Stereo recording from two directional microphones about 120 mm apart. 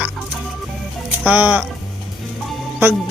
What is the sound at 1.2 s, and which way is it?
Speech, 15° right (ahead or behind).